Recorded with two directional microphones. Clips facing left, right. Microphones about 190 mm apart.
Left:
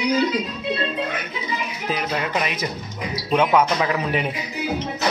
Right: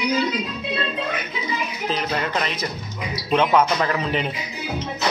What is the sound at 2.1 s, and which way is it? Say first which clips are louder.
Speech: even; 10° left (ahead or behind).